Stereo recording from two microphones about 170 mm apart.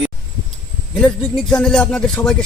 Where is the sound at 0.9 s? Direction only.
5° left (ahead or behind).